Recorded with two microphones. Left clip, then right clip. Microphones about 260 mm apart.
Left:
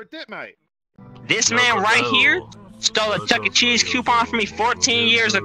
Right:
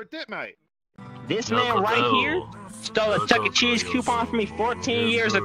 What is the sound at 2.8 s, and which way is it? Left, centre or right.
Music, left.